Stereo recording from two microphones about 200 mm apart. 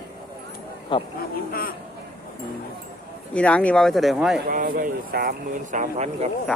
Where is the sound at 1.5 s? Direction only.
50° left (ahead or behind).